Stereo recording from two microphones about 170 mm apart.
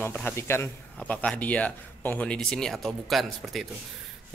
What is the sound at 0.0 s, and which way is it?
Speech, 10° left (ahead or behind).